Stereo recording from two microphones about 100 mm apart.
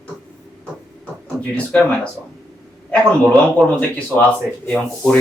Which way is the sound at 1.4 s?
10° left (ahead or behind).